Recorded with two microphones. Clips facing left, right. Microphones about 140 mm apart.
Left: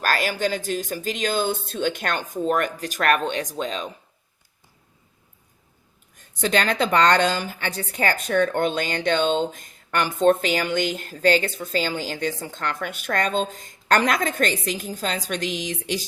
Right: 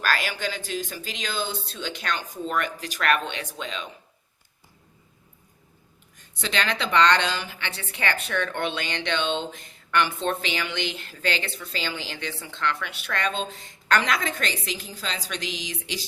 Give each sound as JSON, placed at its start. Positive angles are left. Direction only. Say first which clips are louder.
{"t": 0.0, "sound": "speech", "louder": "left 4 dB", "side_deg": 45}
{"t": 6.1, "sound": "speech", "louder": "left 6 dB", "side_deg": 45}